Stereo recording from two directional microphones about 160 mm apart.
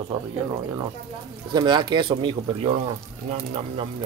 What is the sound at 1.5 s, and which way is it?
Speech, 25° right (ahead or behind).